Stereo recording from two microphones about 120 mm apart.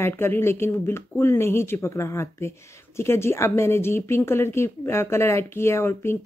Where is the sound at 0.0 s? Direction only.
20° left (ahead or behind).